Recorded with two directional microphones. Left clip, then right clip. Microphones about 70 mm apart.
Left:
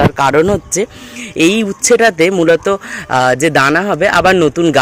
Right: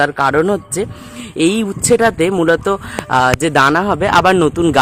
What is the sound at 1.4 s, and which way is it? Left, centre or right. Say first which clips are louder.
Speech: left 3 dB; centre.